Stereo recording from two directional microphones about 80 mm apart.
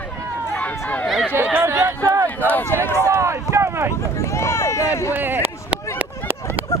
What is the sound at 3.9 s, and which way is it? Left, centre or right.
Vehicle, left.